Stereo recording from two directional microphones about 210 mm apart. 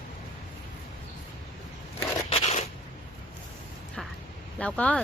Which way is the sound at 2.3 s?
30° left (ahead or behind).